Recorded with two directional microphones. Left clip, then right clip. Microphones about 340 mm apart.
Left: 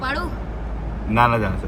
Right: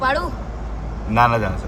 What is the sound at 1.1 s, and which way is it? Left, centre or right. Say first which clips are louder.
Speech: right 1 dB; centre.